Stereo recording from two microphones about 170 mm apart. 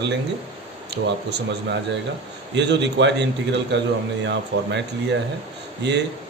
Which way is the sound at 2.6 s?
90° right.